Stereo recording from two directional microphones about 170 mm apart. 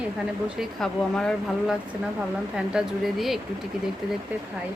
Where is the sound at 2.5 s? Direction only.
5° right (ahead or behind).